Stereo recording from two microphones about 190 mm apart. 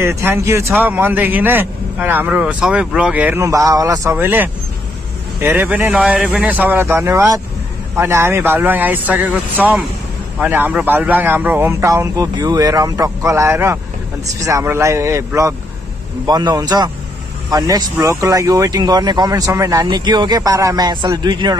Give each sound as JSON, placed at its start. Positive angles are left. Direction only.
{"t": 0.0, "sound": "a man's voice", "side_deg": -15}